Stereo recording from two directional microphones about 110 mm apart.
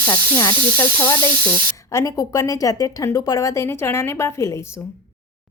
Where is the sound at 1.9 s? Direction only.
30° left (ahead or behind).